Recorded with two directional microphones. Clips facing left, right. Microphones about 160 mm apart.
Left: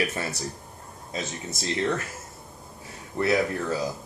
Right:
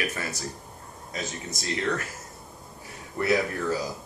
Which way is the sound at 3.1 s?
25° left (ahead or behind).